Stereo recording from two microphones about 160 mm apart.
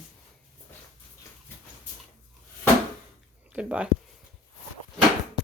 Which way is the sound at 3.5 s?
5° right (ahead or behind).